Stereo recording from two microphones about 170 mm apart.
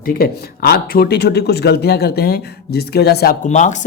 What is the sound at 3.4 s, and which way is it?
Speech, 45° left (ahead or behind).